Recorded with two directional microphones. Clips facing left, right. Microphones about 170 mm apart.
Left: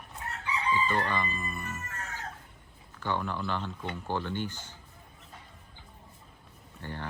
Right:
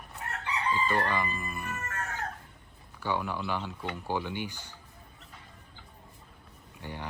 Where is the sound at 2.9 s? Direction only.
10° right (ahead or behind).